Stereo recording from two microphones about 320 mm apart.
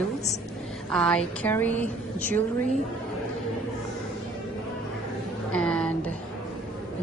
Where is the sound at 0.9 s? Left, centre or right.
Centre.